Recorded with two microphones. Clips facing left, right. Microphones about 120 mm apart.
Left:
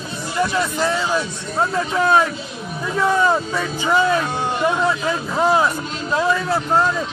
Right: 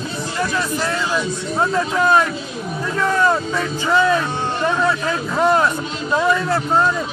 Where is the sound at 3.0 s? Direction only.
10° left (ahead or behind).